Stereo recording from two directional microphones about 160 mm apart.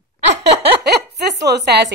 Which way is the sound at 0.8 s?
90° right.